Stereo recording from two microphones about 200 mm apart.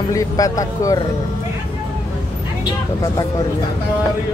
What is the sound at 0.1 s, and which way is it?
Speech, 15° left (ahead or behind).